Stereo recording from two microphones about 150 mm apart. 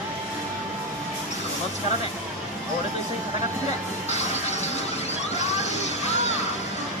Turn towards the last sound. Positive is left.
turn(degrees=50)  # may be behind; listen again after turning